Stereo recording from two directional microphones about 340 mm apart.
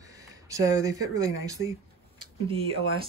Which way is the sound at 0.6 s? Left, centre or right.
Centre.